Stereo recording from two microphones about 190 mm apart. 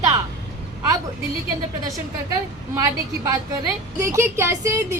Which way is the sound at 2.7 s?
15° right (ahead or behind).